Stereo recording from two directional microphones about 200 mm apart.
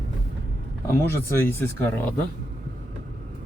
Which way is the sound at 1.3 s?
10° left (ahead or behind).